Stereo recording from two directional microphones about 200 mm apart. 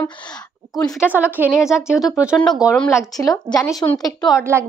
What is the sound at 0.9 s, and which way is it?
A woman's voice, 5° right (ahead or behind).